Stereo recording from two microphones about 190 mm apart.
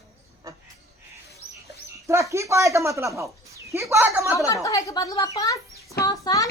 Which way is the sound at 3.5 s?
15° right (ahead or behind).